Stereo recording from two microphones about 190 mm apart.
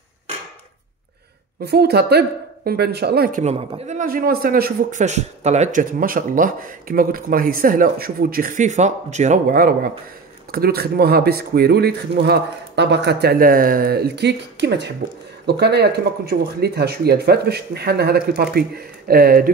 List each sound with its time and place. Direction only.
1.6 s speech: 60° right (ahead or behind)